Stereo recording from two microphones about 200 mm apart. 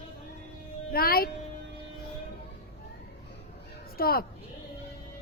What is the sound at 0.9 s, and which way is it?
Speech, 50° left (ahead or behind).